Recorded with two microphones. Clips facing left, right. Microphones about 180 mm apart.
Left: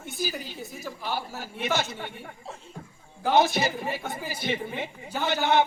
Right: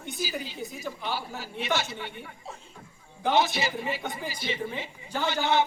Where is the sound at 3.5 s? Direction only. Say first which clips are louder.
Left 2 dB; 50° left (ahead or behind).